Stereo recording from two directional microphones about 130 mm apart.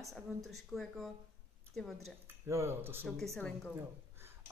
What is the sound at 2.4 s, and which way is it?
Speech, 20° right (ahead or behind).